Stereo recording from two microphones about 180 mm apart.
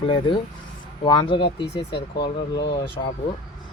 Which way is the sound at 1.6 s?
70° left (ahead or behind).